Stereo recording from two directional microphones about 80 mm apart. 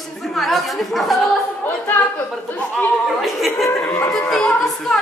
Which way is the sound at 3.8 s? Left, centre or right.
Left.